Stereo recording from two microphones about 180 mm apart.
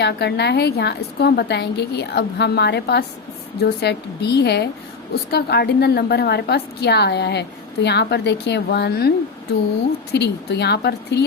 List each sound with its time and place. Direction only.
0.0 s a woman's voice: 65° left (ahead or behind)